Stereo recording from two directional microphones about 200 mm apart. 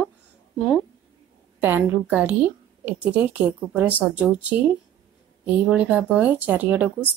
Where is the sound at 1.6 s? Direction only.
10° right (ahead or behind).